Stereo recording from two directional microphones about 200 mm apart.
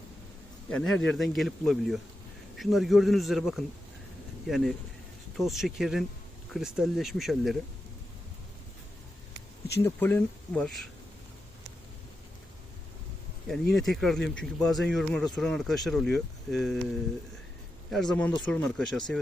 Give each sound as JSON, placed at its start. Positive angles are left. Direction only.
{"t": 0.7, "sound": "speech", "side_deg": 5}
{"t": 9.8, "sound": "speech", "side_deg": 10}
{"t": 13.7, "sound": "speech", "side_deg": 0}
{"t": 17.9, "sound": "speech", "side_deg": 5}